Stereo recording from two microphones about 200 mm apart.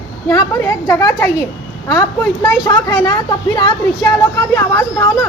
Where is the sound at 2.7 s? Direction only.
20° left (ahead or behind).